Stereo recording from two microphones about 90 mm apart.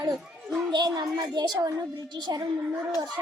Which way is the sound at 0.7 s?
55° right (ahead or behind).